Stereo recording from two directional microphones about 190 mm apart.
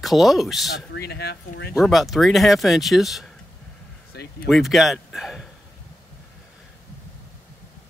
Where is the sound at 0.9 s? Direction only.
55° left (ahead or behind).